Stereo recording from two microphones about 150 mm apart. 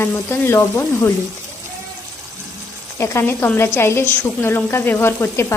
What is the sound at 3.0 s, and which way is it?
A woman's voice, 15° left (ahead or behind).